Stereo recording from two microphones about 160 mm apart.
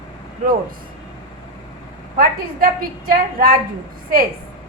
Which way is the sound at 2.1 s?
65° right (ahead or behind).